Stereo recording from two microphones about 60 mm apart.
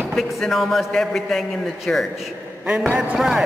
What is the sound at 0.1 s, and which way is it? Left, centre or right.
A woman's voice, centre.